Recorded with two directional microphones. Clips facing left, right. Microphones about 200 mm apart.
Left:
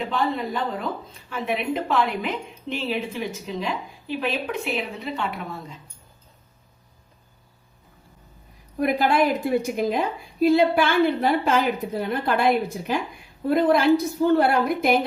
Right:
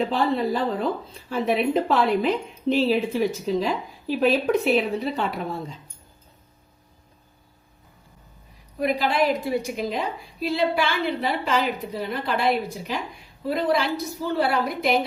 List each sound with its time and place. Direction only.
0.0 s a woman's voice: 35° right (ahead or behind)
8.8 s a woman's voice: 55° left (ahead or behind)